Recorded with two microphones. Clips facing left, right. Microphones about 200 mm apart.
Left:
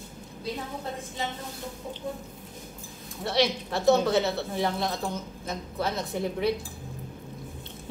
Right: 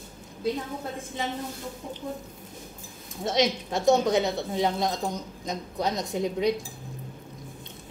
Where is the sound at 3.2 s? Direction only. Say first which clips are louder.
Right 1 dB; 20° right (ahead or behind).